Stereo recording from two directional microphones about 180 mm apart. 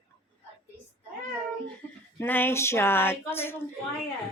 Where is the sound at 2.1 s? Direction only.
10° left (ahead or behind).